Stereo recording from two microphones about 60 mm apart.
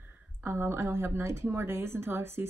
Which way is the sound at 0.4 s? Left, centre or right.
Right.